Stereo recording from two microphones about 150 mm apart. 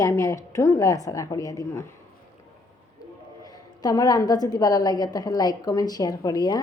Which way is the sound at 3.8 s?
25° left (ahead or behind).